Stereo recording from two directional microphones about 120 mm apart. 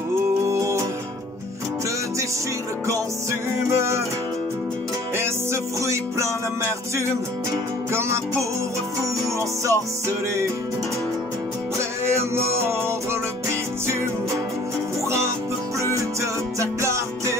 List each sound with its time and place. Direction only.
0.5 s music: 25° right (ahead or behind)
2.9 s music: 25° right (ahead or behind)
5.1 s music: 20° right (ahead or behind)
9.7 s music: 25° right (ahead or behind)
12.6 s music: 20° right (ahead or behind)